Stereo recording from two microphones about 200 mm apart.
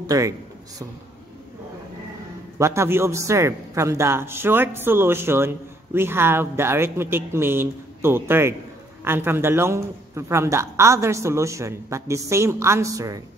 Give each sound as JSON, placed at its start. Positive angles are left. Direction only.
{"t": 0.0, "sound": "speech", "side_deg": -20}
{"t": 2.6, "sound": "a man's voice", "side_deg": -15}